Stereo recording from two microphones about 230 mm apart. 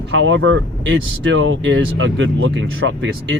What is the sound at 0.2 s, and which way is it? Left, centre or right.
Speech, right.